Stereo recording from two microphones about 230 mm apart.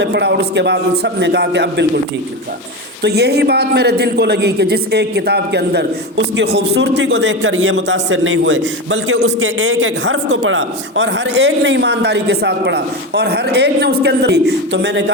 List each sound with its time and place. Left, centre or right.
0.0 s a man's voice: right
3.0 s a man's voice: right